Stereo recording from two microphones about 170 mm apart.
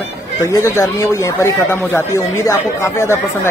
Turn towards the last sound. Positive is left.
turn(degrees=15)  # may be behind; listen again after turning